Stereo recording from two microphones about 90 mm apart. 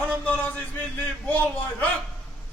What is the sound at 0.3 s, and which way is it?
A man's voice, 15° left (ahead or behind).